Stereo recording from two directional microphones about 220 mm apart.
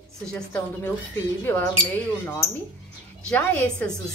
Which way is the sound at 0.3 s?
10° left (ahead or behind).